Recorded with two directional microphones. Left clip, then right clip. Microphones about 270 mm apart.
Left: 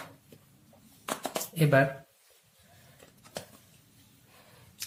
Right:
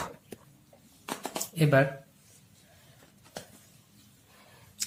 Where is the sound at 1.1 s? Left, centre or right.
Left.